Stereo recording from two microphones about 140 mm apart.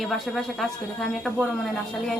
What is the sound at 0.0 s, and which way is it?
Speech, centre (ahead or behind).